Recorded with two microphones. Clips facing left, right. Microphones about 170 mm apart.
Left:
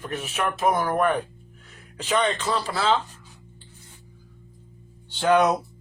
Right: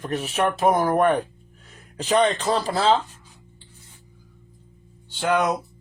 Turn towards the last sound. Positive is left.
turn(degrees=-5)  # may be behind; listen again after turning